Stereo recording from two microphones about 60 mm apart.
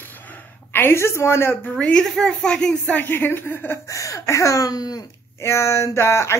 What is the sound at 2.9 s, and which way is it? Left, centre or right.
Speech, left.